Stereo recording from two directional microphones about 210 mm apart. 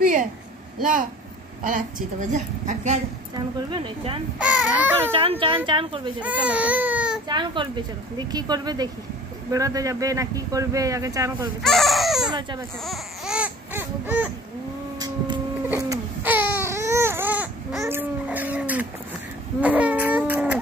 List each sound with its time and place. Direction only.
0.0 s a sound: 40° right (ahead or behind)
1.6 s a woman's voice: 40° right (ahead or behind)
3.7 s speech: 25° right (ahead or behind)
4.4 s speech: 5° right (ahead or behind)
5.1 s speech: 25° right (ahead or behind)
6.2 s speech: 5° right (ahead or behind)
7.2 s speech: 20° right (ahead or behind)
11.6 s baby cry: centre (ahead or behind)
12.3 s speech: 20° right (ahead or behind)
12.8 s baby cry: centre (ahead or behind)
15.7 s baby cry: 10° right (ahead or behind)
19.6 s a sound: 5° right (ahead or behind)